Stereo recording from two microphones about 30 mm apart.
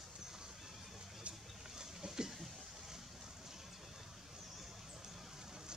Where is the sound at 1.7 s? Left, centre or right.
Right.